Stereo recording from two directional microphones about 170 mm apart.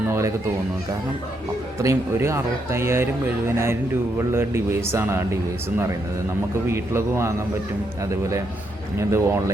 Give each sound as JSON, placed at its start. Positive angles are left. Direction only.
{"t": 1.8, "sound": "speech", "side_deg": -15}
{"t": 6.7, "sound": "speech", "side_deg": -15}
{"t": 9.0, "sound": "speech", "side_deg": -15}